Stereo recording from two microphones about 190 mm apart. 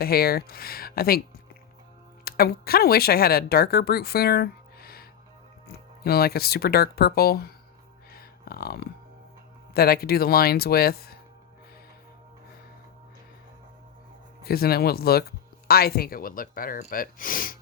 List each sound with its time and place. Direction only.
0.0 s speech: 55° left (ahead or behind)
2.2 s speech: 55° left (ahead or behind)
8.1 s a sound: 55° left (ahead or behind)
9.7 s speech: 55° left (ahead or behind)
14.4 s speech: 55° left (ahead or behind)